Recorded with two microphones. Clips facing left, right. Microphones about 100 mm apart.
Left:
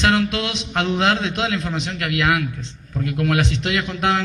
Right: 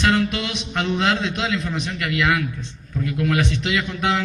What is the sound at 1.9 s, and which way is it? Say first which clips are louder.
A man's voice: left 1 dB; 50° left (ahead or behind).